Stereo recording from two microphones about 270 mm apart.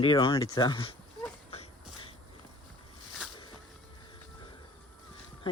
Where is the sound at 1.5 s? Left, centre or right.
Left.